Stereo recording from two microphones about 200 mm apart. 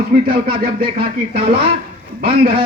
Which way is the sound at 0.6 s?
50° right (ahead or behind).